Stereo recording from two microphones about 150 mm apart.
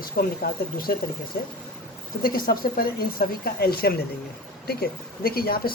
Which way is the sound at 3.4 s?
90° left.